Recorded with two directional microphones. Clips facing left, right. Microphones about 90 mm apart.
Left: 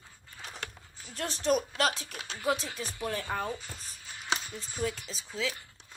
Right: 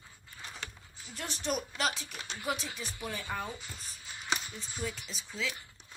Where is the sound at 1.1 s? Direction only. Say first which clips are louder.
Left 7 dB; 35° left (ahead or behind).